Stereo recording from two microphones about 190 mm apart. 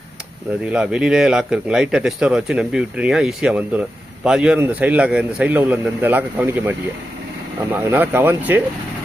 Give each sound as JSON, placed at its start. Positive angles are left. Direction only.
{"t": 0.6, "sound": "a man's voice", "side_deg": -5}